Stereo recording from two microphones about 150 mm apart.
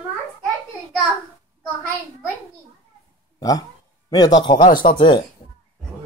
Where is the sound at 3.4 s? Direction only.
25° left (ahead or behind).